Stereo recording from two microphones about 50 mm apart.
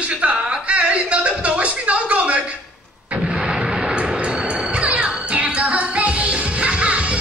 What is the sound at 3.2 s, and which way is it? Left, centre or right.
Artillery fire, centre.